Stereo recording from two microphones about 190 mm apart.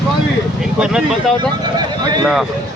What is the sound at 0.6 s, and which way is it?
Speech, 5° right (ahead or behind).